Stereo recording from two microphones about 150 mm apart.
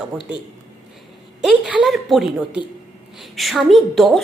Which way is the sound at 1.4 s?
5° right (ahead or behind).